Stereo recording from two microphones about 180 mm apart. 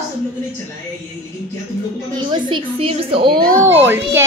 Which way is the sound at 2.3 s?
25° right (ahead or behind).